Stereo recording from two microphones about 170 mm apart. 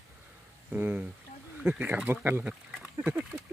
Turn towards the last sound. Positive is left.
turn(degrees=-10)  # may be behind; listen again after turning